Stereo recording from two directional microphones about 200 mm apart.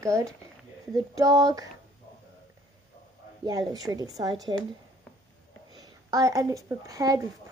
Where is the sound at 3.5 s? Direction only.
15° right (ahead or behind).